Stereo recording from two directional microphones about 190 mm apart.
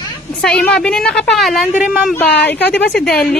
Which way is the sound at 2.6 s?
65° left (ahead or behind).